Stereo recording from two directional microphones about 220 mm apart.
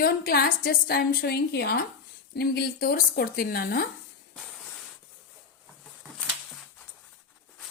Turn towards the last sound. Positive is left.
turn(degrees=5)  # may be behind; listen again after turning